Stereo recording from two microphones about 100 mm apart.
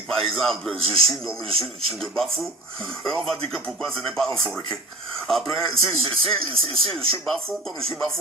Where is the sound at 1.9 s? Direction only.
5° left (ahead or behind).